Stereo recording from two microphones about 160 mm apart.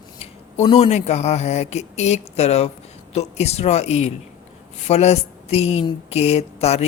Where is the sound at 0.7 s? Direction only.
40° left (ahead or behind).